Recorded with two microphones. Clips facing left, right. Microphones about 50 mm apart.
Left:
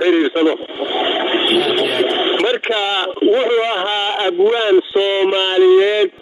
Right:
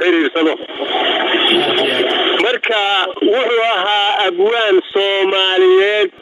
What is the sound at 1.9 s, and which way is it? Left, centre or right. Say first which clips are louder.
Speech: right 1 dB; right.